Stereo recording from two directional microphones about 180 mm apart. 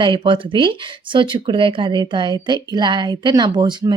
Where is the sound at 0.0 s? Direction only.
25° right (ahead or behind).